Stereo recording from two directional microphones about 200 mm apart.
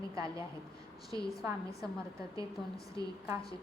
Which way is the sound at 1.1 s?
15° right (ahead or behind).